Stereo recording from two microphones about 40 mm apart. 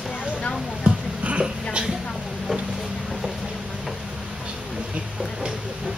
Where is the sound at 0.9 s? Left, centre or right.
Right.